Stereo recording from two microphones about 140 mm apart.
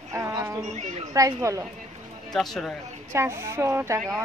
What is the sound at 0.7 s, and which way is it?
Speech, 55° right (ahead or behind).